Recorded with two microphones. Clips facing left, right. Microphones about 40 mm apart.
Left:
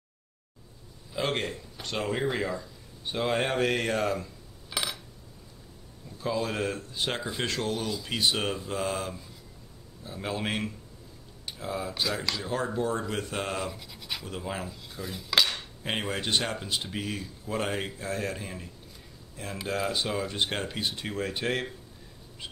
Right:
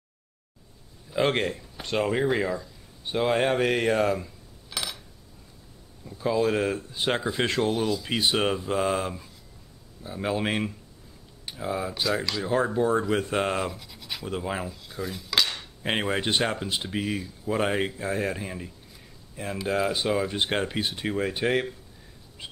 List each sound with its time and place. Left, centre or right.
1.1 s speech: centre
4.6 s a sound: centre
6.0 s speech: centre
7.3 s mantra: right
10.0 s speech: centre
13.1 s mantra: right
13.7 s scratch: centre
14.2 s speech: centre
14.7 s dishes: centre
15.8 s speech: centre
22.4 s bird: centre